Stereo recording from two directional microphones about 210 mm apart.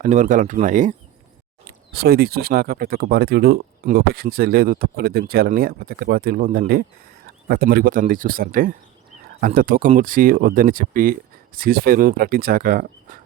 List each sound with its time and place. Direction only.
0.0 s speech: 35° right (ahead or behind)
1.6 s speech: 50° right (ahead or behind)